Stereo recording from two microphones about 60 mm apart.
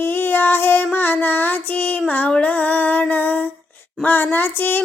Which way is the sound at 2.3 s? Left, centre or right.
Left.